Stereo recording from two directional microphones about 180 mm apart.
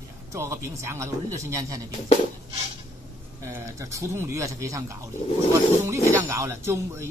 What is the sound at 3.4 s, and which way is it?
Speech, 15° right (ahead or behind).